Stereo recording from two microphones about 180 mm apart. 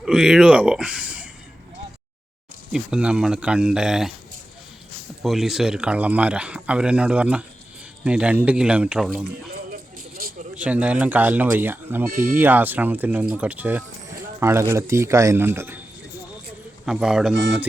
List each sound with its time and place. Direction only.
0.0 s speech: 5° right (ahead or behind)
2.7 s speech: 5° right (ahead or behind)
5.2 s speech: centre (ahead or behind)
10.5 s speech: 5° right (ahead or behind)
12.1 s speech: 50° right (ahead or behind)
12.4 s speech: 10° right (ahead or behind)
16.8 s speech: 5° right (ahead or behind)